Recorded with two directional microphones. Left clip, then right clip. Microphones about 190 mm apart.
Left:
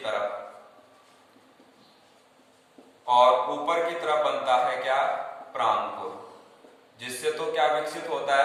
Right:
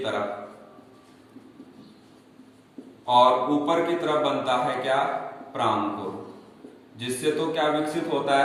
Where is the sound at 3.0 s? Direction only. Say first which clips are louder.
Right 1 dB; 15° right (ahead or behind).